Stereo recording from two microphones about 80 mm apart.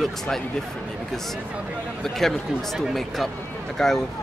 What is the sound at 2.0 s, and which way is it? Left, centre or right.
Speech, centre.